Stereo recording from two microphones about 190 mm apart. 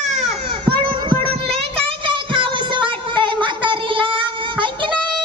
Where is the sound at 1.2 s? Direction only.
30° right (ahead or behind).